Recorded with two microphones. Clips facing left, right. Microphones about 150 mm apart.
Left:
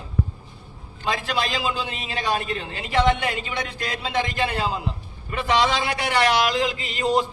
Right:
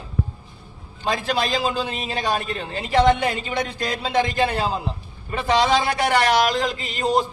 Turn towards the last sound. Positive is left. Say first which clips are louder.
# right 1 dB
turn(degrees=-40)  # may be behind; listen again after turning